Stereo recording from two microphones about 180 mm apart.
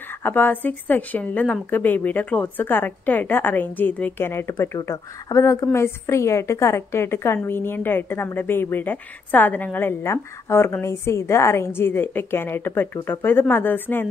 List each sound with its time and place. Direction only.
0.2 s a woman's voice: 10° left (ahead or behind)